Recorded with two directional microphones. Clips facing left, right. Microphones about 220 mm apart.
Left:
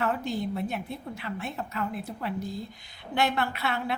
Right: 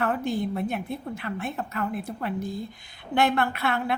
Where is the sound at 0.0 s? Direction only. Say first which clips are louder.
Right 3 dB; 55° right (ahead or behind).